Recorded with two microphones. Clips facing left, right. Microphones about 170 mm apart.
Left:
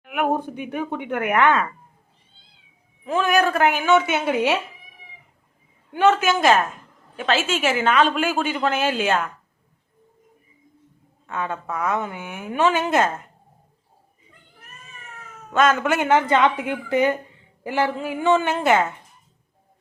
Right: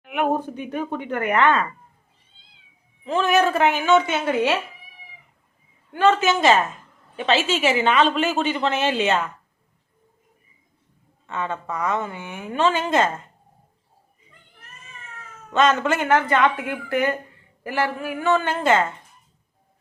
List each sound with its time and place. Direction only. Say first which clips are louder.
0.0 s a sound: even; centre (ahead or behind)
0.4 s a woman's voice: even; 10° left (ahead or behind)
3.0 s a woman's voice: right 1 dB; centre (ahead or behind)
5.9 s a woman's voice: left 1 dB; 15° left (ahead or behind)
6.1 s speech: even; centre (ahead or behind)
11.3 s a woman's voice: even; 5° left (ahead or behind)
15.4 s a woman's voice: even; centre (ahead or behind)